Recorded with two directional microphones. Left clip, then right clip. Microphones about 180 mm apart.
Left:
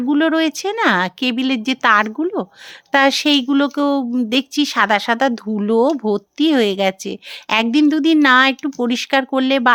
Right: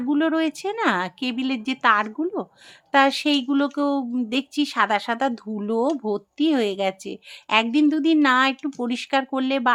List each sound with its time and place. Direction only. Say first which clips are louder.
0.1 s speech: left 6 dB; 35° left (ahead or behind)